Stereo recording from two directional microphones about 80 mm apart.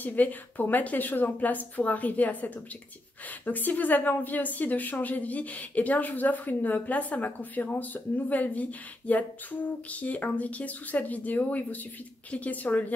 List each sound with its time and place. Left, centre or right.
0.0 s a woman's voice: left